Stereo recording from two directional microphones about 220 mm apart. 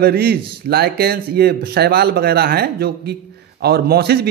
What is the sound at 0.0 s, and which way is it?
A man's voice, 45° right (ahead or behind).